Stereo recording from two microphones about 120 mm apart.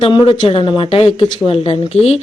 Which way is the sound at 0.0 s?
50° left (ahead or behind).